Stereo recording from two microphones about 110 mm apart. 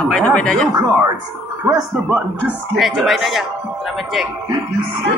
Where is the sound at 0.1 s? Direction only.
5° left (ahead or behind).